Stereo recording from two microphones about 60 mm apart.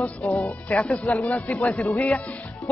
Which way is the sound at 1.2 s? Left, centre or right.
Left.